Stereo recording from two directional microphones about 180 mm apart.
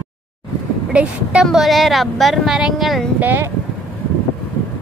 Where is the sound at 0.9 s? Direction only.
5° right (ahead or behind).